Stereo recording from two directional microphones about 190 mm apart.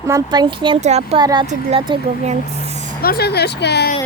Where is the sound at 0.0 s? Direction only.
15° right (ahead or behind); by 1.2 s 35° right (ahead or behind).